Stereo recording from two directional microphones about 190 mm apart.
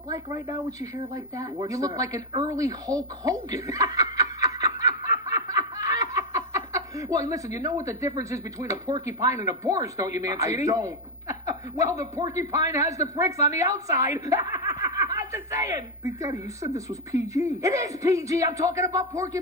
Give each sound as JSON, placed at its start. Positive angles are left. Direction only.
{"t": 0.1, "sound": "speech", "side_deg": -15}
{"t": 14.5, "sound": "snicker", "side_deg": -15}
{"t": 14.9, "sound": "speech", "side_deg": -15}